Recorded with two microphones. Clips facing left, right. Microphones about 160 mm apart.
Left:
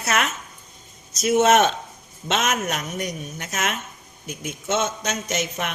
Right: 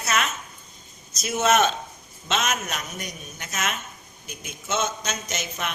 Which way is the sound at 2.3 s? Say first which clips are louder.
Left 3 dB; 60° left (ahead or behind).